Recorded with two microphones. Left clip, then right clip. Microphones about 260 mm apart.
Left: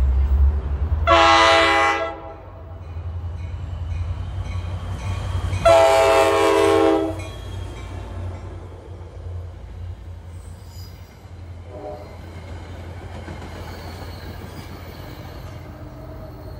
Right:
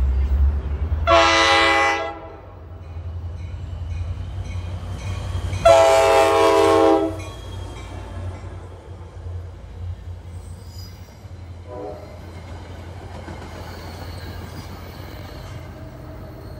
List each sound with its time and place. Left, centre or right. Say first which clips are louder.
1.0 s train: left 1 dB; centre
4.9 s train: left 2 dB; centre
7.7 s music: even; right
15.2 s music: right 1 dB; right